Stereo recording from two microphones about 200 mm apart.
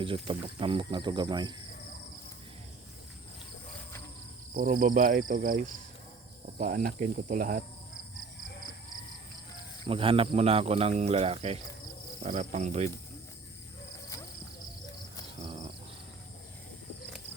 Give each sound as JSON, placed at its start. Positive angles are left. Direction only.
{"t": 0.0, "sound": "speech", "side_deg": -25}
{"t": 4.5, "sound": "speech", "side_deg": -45}
{"t": 9.8, "sound": "speech", "side_deg": -25}
{"t": 12.2, "sound": "cricket", "side_deg": -35}
{"t": 15.4, "sound": "a sound", "side_deg": -35}